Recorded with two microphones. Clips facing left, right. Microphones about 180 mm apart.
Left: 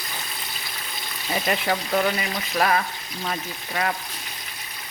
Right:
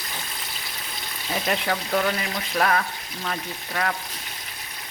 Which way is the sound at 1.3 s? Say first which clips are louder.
Left 1 dB; 5° left (ahead or behind).